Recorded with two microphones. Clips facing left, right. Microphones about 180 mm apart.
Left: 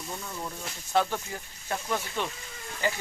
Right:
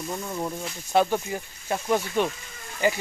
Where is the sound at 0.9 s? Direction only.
15° right (ahead or behind).